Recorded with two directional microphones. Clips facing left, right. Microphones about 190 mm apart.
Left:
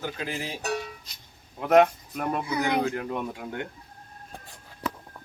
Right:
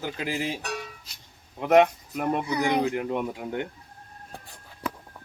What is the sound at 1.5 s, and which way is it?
Speech, 5° right (ahead or behind).